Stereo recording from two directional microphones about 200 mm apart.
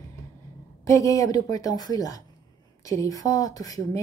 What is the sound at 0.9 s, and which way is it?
Speech, 15° left (ahead or behind).